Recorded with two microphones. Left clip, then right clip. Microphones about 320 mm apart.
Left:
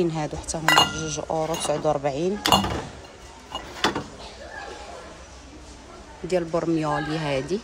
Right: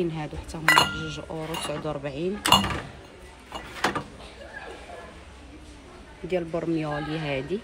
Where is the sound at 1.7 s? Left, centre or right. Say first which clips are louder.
Left 8 dB; centre.